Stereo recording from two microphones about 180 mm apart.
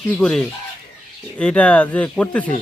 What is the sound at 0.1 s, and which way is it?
A man's voice, 5° left (ahead or behind).